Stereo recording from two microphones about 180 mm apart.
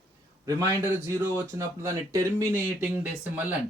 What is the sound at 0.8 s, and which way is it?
Speech, 15° right (ahead or behind).